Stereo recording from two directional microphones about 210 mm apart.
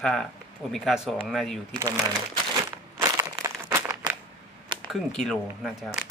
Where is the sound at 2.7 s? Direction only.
15° right (ahead or behind).